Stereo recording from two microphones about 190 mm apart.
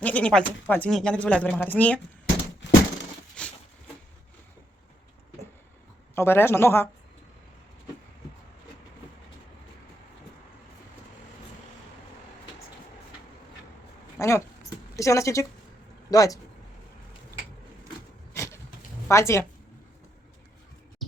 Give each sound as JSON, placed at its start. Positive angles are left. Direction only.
{"t": 0.0, "sound": "speech", "side_deg": 5}
{"t": 2.6, "sound": "a sound", "side_deg": 65}
{"t": 3.4, "sound": "a sound", "side_deg": 5}
{"t": 6.1, "sound": "speech", "side_deg": 10}
{"t": 14.2, "sound": "speech", "side_deg": 15}
{"t": 18.3, "sound": "vehicle", "side_deg": 15}
{"t": 19.0, "sound": "speech", "side_deg": 15}